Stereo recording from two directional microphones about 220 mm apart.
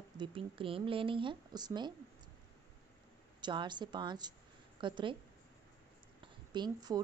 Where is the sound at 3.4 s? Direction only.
20° right (ahead or behind).